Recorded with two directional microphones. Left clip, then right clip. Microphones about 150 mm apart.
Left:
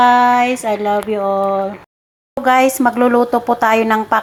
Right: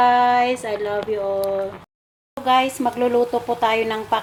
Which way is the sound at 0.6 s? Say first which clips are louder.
Left 7 dB; 35° left (ahead or behind).